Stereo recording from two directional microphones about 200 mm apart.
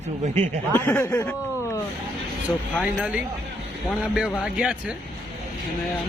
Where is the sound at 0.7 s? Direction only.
10° left (ahead or behind).